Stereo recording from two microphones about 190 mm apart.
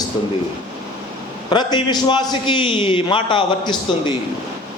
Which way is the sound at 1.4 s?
25° left (ahead or behind).